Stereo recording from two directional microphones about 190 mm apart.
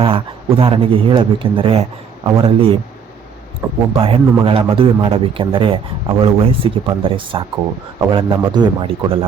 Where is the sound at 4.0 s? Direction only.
30° right (ahead or behind).